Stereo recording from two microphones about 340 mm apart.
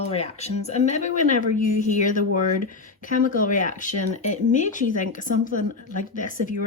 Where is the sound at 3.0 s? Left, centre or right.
Left.